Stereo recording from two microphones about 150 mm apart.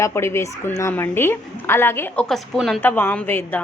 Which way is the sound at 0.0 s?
15° left (ahead or behind).